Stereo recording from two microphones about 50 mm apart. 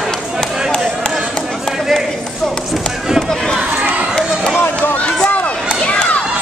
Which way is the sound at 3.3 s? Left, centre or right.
Centre.